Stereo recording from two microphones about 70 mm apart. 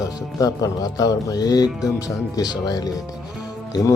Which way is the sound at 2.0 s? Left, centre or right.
Left.